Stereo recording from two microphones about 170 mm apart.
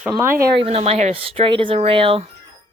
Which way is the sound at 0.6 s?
35° right (ahead or behind).